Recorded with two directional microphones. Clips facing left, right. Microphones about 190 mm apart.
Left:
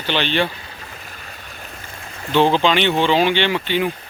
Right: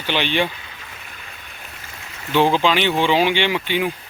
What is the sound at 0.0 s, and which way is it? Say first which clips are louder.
Speech: left 1 dB; 15° right (ahead or behind).